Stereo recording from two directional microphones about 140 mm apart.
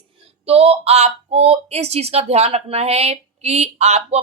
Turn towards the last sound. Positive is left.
turn(degrees=-50)  # may be behind; listen again after turning